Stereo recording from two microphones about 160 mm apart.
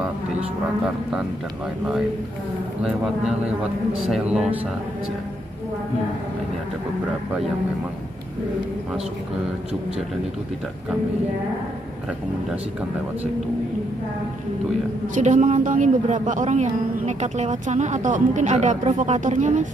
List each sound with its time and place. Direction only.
2.8 s a man's voice: 5° right (ahead or behind)
15.1 s a woman's voice: 50° right (ahead or behind)